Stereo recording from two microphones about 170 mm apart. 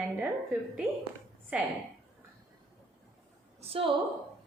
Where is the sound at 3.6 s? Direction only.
35° right (ahead or behind).